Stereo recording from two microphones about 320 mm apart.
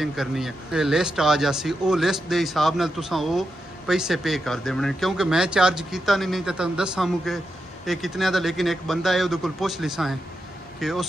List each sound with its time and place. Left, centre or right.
0.0 s speech: centre